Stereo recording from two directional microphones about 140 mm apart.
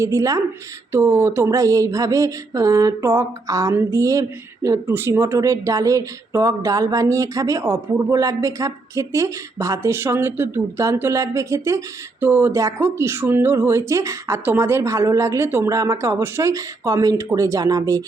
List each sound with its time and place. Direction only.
0.0 s speech: 20° right (ahead or behind)